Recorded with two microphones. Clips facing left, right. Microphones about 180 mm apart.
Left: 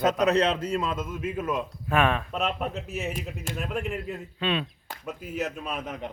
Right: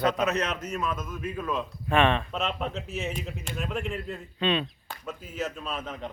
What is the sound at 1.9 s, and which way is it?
Speech, 5° left (ahead or behind).